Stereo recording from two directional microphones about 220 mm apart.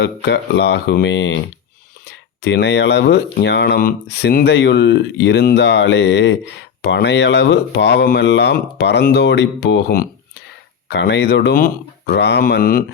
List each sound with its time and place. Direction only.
0.0 s speech: 50° left (ahead or behind)